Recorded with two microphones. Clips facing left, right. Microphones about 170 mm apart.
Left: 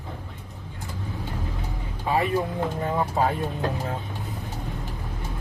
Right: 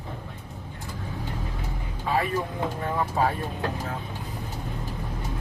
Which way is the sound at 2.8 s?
15° left (ahead or behind).